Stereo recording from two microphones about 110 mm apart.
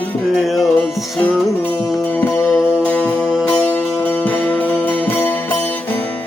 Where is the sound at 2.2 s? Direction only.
15° left (ahead or behind).